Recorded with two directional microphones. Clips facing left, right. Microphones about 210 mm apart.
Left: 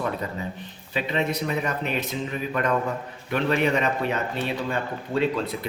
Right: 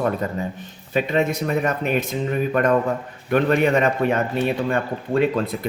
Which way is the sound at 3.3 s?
50° right (ahead or behind).